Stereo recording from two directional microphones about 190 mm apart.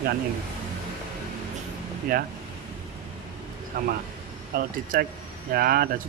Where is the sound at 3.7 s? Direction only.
50° right (ahead or behind).